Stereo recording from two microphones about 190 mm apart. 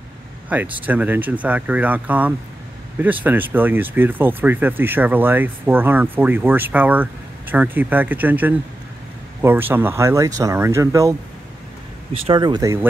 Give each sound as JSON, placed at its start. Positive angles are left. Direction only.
{"t": 0.5, "sound": "speech", "side_deg": -5}